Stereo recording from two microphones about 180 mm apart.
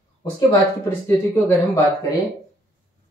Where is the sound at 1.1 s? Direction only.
15° left (ahead or behind).